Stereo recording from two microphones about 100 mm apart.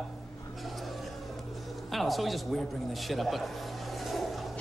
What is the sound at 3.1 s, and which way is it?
Speech, centre (ahead or behind).